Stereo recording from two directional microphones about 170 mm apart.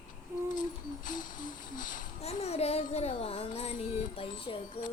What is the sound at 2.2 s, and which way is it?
Child singing, 40° left (ahead or behind).